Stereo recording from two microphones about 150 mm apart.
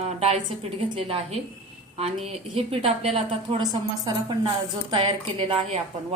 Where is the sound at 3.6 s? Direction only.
30° right (ahead or behind).